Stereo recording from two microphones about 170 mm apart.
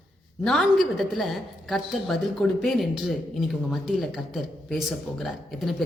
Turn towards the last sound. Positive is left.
turn(degrees=0)  # may be behind; listen again after turning